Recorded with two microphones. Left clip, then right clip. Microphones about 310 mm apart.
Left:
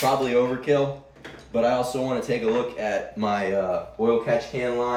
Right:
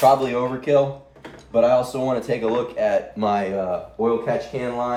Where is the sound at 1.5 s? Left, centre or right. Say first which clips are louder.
Right 5 dB; centre.